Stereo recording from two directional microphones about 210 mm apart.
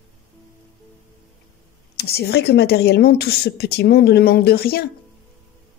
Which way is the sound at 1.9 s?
50° left (ahead or behind).